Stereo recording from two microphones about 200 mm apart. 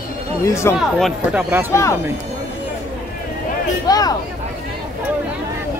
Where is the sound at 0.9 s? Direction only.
Centre (ahead or behind).